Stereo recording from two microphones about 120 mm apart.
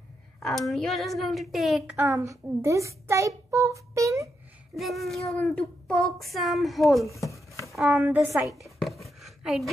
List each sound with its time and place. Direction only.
0.4 s a woman's voice: centre (ahead or behind)
2.0 s a child's voice: 20° right (ahead or behind)
4.7 s a woman's voice: centre (ahead or behind)
7.1 s a sound: 25° left (ahead or behind)
7.9 s a woman's voice: 15° right (ahead or behind)
8.4 s a sound: centre (ahead or behind)